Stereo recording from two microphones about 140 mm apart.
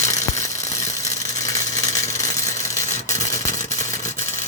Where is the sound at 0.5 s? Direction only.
55° left (ahead or behind).